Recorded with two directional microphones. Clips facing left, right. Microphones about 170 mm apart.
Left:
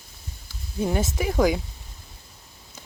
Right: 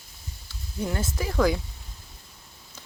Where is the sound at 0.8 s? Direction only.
20° left (ahead or behind).